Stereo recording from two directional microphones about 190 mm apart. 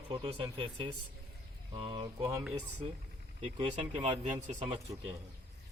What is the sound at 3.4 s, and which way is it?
Speech, 30° right (ahead or behind).